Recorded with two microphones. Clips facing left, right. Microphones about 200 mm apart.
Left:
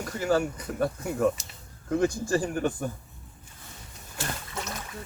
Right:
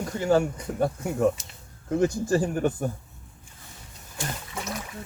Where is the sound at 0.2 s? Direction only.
25° right (ahead or behind).